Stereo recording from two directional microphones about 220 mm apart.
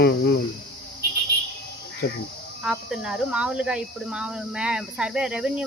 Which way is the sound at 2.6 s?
5° right (ahead or behind).